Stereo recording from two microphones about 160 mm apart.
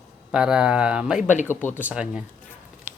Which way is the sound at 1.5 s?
15° left (ahead or behind).